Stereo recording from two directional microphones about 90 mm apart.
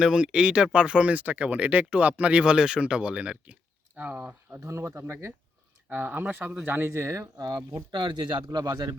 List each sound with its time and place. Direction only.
0.0 s speech: 10° right (ahead or behind)
4.6 s speech: 30° right (ahead or behind)
7.8 s speech: 60° right (ahead or behind)
8.5 s speech: 45° right (ahead or behind)